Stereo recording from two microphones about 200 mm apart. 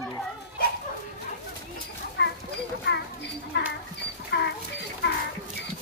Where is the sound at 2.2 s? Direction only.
60° left (ahead or behind).